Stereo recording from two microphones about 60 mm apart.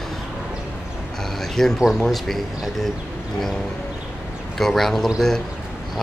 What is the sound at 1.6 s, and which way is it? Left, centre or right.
Speech, centre.